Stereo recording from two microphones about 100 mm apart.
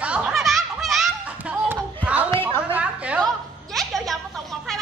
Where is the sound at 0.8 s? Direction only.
Centre (ahead or behind).